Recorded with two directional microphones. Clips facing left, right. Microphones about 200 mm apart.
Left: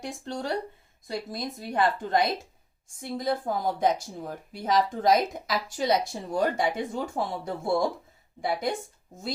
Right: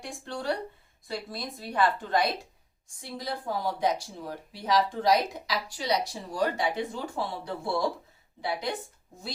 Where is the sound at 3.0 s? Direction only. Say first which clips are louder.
Left 7 dB; 50° left (ahead or behind).